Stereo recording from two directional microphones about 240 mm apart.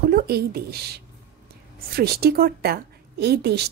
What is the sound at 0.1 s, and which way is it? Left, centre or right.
A woman's voice, right.